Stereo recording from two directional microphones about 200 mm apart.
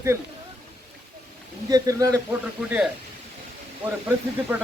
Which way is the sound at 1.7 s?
15° right (ahead or behind).